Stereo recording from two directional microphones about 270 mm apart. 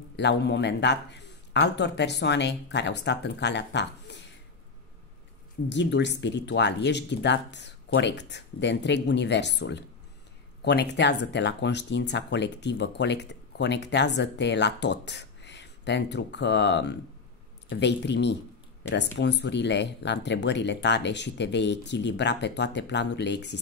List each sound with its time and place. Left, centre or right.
0.1 s speech: left
5.7 s speech: left